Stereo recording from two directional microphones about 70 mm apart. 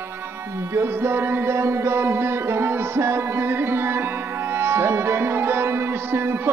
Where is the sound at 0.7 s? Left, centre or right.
Right.